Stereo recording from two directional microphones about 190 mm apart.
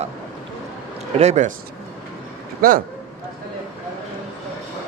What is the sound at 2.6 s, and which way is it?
Speech, 50° right (ahead or behind).